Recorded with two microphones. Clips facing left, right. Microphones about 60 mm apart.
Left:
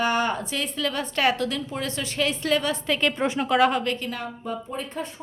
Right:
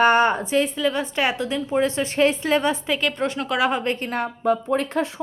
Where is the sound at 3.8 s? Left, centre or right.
Right.